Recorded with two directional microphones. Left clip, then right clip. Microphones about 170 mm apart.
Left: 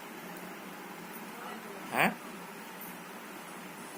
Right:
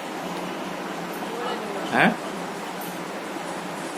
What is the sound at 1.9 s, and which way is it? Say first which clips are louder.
Speech: right 9 dB; 25° left (ahead or behind).